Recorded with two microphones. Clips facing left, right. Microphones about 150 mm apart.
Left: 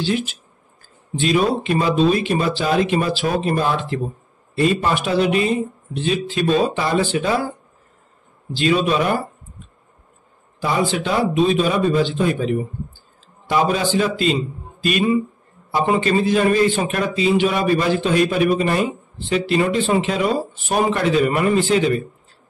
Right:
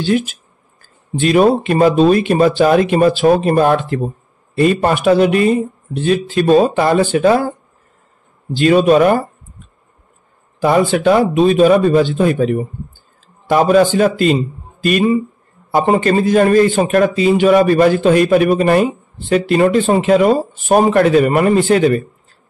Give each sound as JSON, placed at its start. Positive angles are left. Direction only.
{"t": 0.0, "sound": "a man's voice", "side_deg": -50}
{"t": 8.5, "sound": "a man's voice", "side_deg": -50}
{"t": 10.6, "sound": "a man's voice", "side_deg": -55}